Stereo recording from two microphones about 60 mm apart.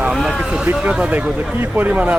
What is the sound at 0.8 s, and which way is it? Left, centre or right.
Speech, right.